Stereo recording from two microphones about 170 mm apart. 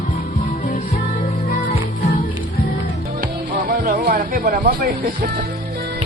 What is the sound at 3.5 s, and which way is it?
Speech, 55° right (ahead or behind).